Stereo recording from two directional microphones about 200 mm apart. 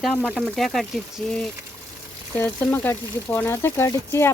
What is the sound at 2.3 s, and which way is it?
Speech, 10° left (ahead or behind).